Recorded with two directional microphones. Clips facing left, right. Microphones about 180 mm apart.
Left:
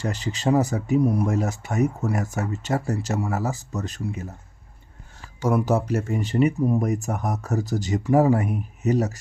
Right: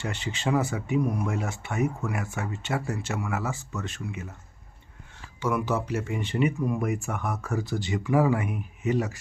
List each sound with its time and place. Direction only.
0.0 s speech: 40° left (ahead or behind)
5.4 s speech: 40° left (ahead or behind)